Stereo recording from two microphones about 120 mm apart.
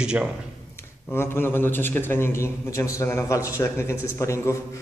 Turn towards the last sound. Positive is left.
turn(degrees=25)  # may be behind; listen again after turning